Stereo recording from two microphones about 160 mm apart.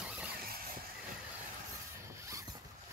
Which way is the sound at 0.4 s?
65° right (ahead or behind).